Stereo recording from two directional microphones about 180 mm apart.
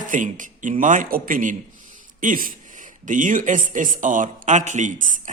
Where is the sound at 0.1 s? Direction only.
45° right (ahead or behind).